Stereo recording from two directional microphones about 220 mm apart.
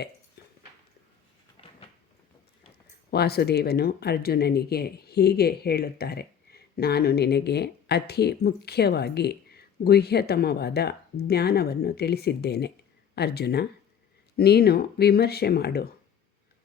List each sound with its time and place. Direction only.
3.1 s speech: 45° left (ahead or behind)